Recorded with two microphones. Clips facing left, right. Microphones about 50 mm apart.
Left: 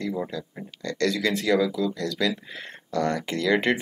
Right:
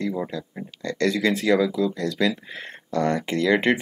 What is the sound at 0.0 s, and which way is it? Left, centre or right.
Speech, centre.